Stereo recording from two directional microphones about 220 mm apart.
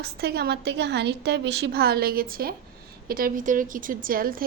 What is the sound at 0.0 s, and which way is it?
A woman's voice, 45° right (ahead or behind).